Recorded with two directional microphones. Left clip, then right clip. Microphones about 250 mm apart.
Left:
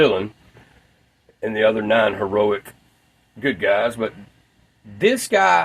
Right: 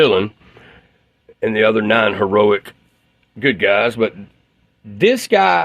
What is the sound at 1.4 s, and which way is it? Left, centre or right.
Speech, right.